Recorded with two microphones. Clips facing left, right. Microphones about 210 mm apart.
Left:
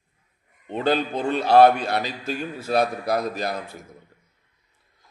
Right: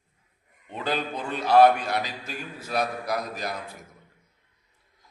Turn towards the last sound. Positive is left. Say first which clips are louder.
# left 6 dB
turn(degrees=30)  # may be behind; listen again after turning